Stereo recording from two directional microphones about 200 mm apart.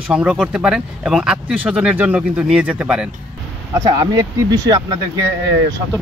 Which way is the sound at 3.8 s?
20° right (ahead or behind).